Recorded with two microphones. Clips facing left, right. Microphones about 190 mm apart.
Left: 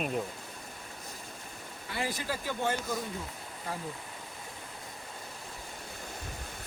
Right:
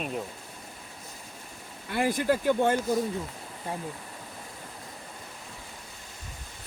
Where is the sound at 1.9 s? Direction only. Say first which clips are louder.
Right 10 dB; 55° right (ahead or behind).